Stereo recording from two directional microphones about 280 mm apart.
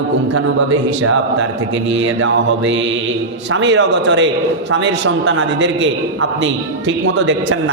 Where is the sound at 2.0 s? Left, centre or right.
Right.